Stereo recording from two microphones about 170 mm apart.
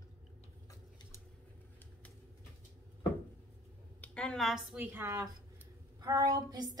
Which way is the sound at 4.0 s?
5° left (ahead or behind).